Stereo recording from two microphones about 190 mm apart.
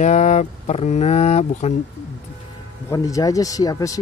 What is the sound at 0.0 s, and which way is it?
Speech, 40° left (ahead or behind).